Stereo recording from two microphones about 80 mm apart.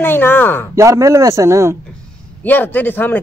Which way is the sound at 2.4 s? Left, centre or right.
Left.